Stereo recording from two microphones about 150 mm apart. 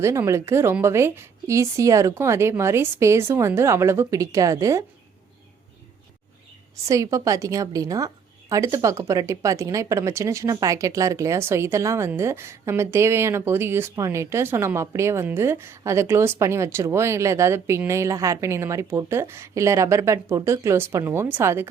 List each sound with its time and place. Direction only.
0.0 s a woman's voice: 20° right (ahead or behind)
6.8 s a woman's voice: 20° right (ahead or behind)